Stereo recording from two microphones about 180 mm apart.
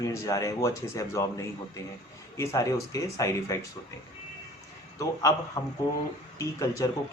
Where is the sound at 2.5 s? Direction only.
15° left (ahead or behind).